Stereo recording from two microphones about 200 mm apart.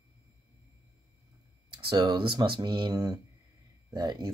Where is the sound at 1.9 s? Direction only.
25° right (ahead or behind).